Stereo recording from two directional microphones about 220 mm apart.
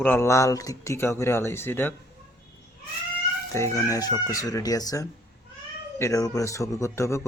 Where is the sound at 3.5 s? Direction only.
15° left (ahead or behind).